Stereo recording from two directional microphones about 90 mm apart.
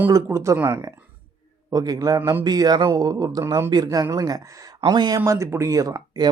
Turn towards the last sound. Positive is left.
turn(degrees=-45)  # may be behind; listen again after turning